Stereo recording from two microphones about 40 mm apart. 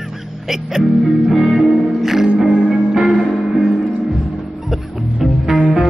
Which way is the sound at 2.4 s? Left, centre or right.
Right.